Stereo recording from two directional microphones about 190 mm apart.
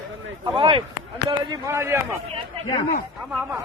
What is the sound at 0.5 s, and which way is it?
Speech, 25° right (ahead or behind).